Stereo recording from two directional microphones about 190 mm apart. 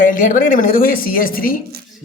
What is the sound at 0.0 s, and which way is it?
A man's voice, 45° left (ahead or behind).